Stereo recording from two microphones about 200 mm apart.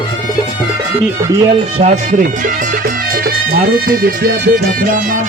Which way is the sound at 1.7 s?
40° right (ahead or behind).